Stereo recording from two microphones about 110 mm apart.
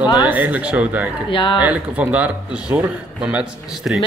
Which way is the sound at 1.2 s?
50° left (ahead or behind).